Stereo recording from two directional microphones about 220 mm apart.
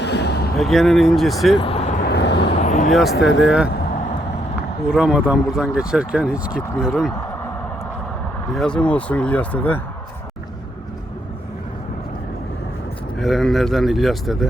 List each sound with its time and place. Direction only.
0.0 s a sound: 50° left (ahead or behind)
0.5 s speech: centre (ahead or behind)
1.5 s a sound: 25° left (ahead or behind)
2.0 s vehicle: 50° left (ahead or behind)
2.4 s vehicle: 30° left (ahead or behind)
2.9 s speech: centre (ahead or behind)
3.2 s speech: 55° left (ahead or behind)
3.4 s speech: 5° right (ahead or behind)
4.9 s speech: 5° right (ahead or behind)
8.5 s speech: 5° left (ahead or behind)
13.1 s speech: centre (ahead or behind)